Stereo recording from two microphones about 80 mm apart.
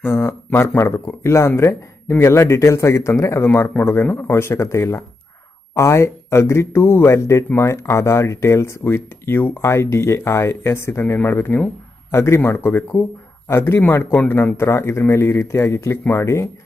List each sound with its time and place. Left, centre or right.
0.0 s speech: left